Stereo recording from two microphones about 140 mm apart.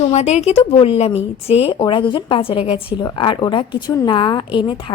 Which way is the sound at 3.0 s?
35° left (ahead or behind).